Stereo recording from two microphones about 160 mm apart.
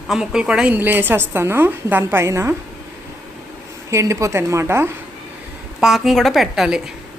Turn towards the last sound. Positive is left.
turn(degrees=-5)  # may be behind; listen again after turning